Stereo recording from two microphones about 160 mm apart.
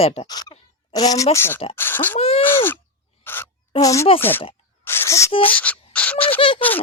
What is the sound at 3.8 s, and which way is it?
Speech, 20° left (ahead or behind).